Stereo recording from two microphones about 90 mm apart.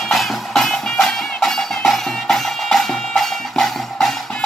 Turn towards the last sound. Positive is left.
turn(degrees=5)  # may be behind; listen again after turning